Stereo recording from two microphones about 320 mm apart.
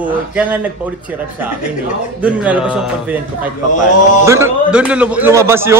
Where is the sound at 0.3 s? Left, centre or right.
Centre.